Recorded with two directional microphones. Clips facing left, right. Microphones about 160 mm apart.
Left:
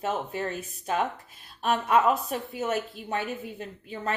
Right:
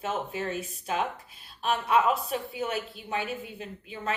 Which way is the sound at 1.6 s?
45° left (ahead or behind).